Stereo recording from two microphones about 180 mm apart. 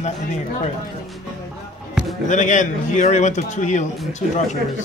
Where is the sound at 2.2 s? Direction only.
45° left (ahead or behind).